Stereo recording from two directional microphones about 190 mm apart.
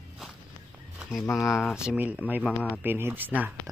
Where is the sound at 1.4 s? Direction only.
15° left (ahead or behind).